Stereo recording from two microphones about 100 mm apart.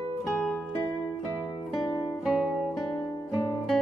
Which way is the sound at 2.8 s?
40° left (ahead or behind).